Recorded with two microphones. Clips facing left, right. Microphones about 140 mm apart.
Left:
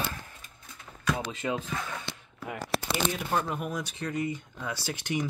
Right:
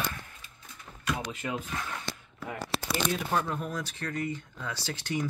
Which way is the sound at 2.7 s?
50° left (ahead or behind).